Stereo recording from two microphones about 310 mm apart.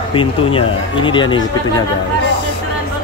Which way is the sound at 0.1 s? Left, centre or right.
Centre.